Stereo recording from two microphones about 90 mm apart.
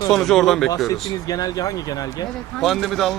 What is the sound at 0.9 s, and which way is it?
Speech, 45° left (ahead or behind).